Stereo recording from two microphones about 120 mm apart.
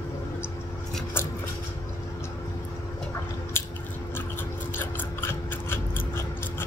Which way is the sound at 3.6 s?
20° left (ahead or behind).